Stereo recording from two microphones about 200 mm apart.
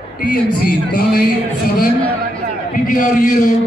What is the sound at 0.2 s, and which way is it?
A man's voice, 45° left (ahead or behind).